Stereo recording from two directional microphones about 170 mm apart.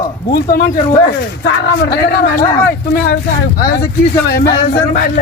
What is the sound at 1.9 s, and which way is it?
Speech, 65° left (ahead or behind).